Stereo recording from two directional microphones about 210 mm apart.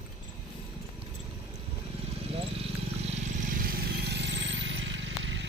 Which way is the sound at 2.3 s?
30° right (ahead or behind).